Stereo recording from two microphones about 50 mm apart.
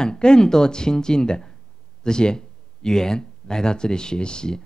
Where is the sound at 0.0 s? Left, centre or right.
Centre.